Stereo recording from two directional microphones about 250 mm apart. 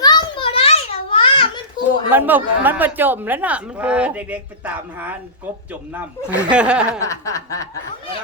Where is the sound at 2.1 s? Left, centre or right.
Centre.